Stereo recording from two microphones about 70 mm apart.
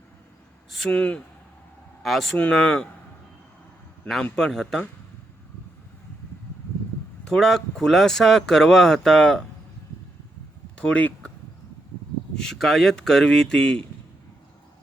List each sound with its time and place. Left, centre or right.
0.9 s speech: centre
2.0 s speech: centre
4.2 s speech: centre
7.3 s speech: centre
10.8 s speech: centre
12.4 s speech: centre